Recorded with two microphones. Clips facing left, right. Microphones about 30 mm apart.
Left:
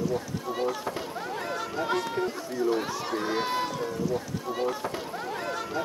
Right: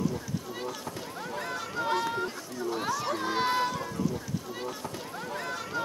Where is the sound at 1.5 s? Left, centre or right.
Centre.